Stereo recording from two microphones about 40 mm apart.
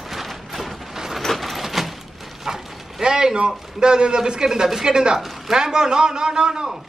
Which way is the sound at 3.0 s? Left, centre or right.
Centre.